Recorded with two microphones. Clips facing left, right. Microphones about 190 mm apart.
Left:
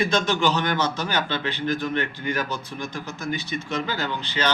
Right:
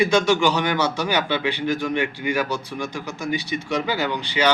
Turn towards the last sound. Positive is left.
turn(degrees=-15)  # may be behind; listen again after turning